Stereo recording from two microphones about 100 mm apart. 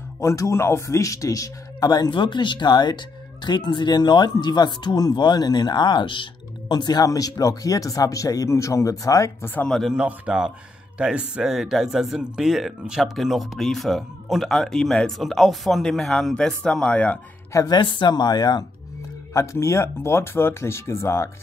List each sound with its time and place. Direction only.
0.2 s a man's voice: 30° left (ahead or behind)
9.7 s speech: 5° left (ahead or behind)
9.9 s speech: 10° right (ahead or behind); by 17.2 s 15° left (ahead or behind)
17.5 s a woman's voice: 35° left (ahead or behind)
17.7 s speech: 55° left (ahead or behind)
19.3 s speech: 30° left (ahead or behind)